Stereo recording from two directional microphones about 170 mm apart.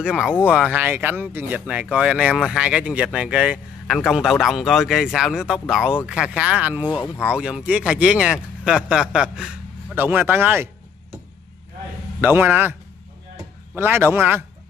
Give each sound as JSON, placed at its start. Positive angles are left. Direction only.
{"t": 0.0, "sound": "speech", "side_deg": -5}
{"t": 12.2, "sound": "speech", "side_deg": -10}
{"t": 13.7, "sound": "speech", "side_deg": -10}